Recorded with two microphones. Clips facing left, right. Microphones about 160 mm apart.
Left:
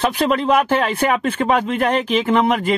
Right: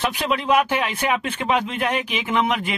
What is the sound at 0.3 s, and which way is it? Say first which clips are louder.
Speech: left 1 dB; 55° left (ahead or behind).